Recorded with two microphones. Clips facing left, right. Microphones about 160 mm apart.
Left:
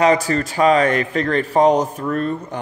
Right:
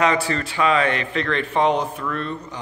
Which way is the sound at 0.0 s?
40° left (ahead or behind).